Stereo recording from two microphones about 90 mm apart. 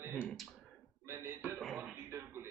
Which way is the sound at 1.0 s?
30° right (ahead or behind).